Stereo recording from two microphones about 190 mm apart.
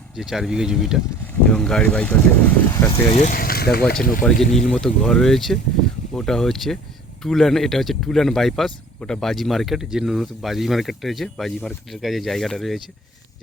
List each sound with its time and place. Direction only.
0.2 s speech: centre (ahead or behind)
3.1 s speech: 35° left (ahead or behind)
3.3 s speech: 55° left (ahead or behind)
4.2 s speech: centre (ahead or behind)